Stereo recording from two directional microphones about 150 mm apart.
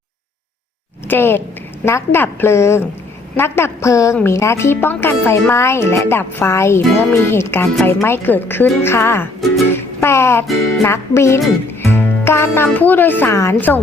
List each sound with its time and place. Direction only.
1.0 s a woman's voice: 15° left (ahead or behind)
9.6 s music: 15° left (ahead or behind)
10.8 s speech: 15° left (ahead or behind)